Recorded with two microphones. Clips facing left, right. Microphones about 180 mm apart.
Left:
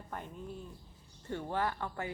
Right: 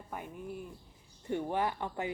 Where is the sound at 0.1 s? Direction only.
10° right (ahead or behind).